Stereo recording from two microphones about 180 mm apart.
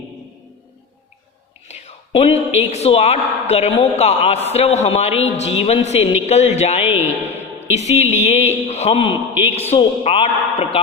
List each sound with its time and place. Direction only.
1.6 s a woman's voice: 35° left (ahead or behind)
9.3 s a man's voice: 10° right (ahead or behind)
9.6 s a woman's voice: 35° left (ahead or behind)